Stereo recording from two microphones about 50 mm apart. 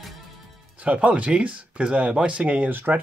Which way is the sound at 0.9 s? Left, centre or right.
Right.